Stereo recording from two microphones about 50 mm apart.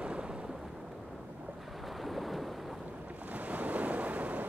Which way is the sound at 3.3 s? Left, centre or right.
Right.